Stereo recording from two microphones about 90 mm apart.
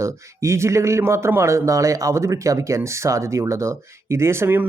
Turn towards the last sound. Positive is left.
turn(degrees=-25)  # may be behind; listen again after turning